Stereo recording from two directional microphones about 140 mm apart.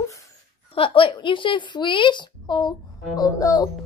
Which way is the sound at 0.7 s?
40° left (ahead or behind).